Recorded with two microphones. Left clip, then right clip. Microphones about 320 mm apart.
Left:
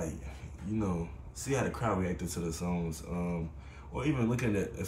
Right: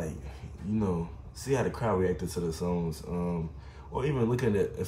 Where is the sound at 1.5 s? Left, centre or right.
Centre.